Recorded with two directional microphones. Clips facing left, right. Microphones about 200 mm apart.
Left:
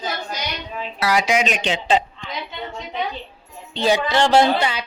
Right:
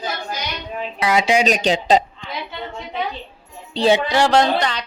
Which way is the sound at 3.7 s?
30° right (ahead or behind).